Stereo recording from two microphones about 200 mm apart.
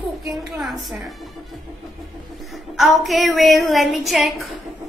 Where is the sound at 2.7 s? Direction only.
Centre (ahead or behind).